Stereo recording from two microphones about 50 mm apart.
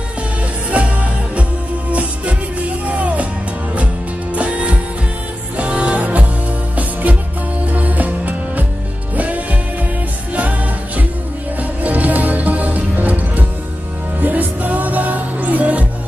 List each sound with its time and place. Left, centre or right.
0.7 s music: right
11.8 s music: right